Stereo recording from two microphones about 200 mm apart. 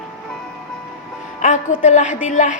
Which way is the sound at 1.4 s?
40° left (ahead or behind).